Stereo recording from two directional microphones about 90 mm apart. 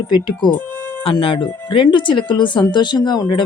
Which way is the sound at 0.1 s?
50° left (ahead or behind).